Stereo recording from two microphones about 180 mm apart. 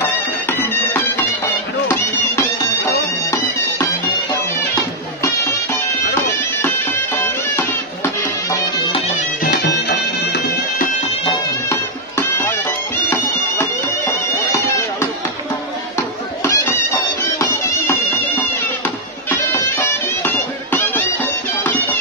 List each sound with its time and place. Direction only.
0.0 s music: 10° left (ahead or behind)
4.7 s music: 15° left (ahead or behind)
7.5 s music: 15° left (ahead or behind)
9.4 s music: 65° left (ahead or behind)
11.7 s music: 15° left (ahead or behind)
16.4 s music: 15° left (ahead or behind)
19.3 s music: 15° left (ahead or behind)